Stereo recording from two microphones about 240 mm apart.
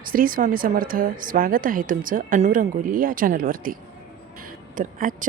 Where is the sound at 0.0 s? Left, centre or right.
Right.